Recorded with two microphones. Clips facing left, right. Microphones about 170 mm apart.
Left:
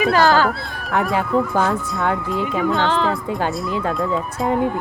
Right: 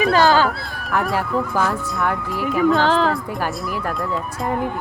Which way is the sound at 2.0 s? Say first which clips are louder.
Left 2 dB; 20° left (ahead or behind).